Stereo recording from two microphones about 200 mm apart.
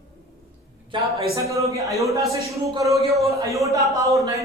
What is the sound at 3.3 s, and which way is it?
Speech, 15° right (ahead or behind).